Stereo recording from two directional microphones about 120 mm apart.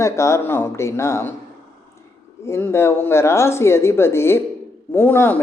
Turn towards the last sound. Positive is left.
turn(degrees=20)  # may be behind; listen again after turning